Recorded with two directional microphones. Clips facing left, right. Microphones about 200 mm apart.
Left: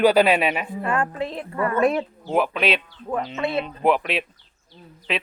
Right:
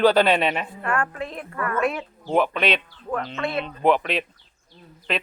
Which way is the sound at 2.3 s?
5° left (ahead or behind).